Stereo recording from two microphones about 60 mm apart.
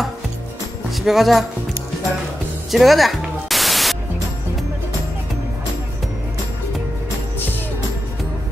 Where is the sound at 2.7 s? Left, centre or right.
Centre.